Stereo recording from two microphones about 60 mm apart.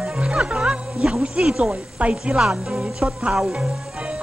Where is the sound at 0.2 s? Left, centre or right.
Centre.